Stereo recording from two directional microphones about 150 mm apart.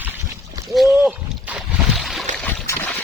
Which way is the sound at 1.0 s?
10° right (ahead or behind).